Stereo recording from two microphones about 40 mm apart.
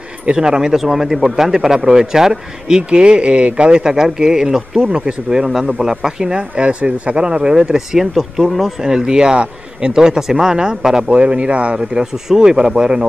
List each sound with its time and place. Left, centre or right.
0.2 s a man's voice: right
2.9 s a man's voice: right
7.5 s a man's voice: centre
8.1 s speech: centre
8.8 s a man's voice: centre
11.1 s speech: right
11.9 s a man's voice: centre